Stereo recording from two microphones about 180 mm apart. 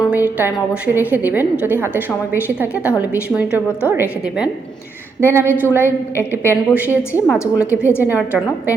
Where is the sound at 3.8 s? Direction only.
10° right (ahead or behind).